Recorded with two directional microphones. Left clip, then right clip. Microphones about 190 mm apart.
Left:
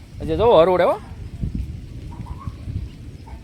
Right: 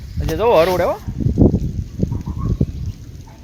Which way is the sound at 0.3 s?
15° left (ahead or behind).